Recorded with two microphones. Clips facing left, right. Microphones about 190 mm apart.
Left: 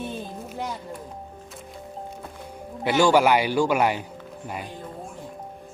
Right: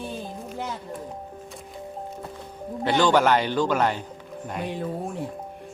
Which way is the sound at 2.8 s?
10° left (ahead or behind).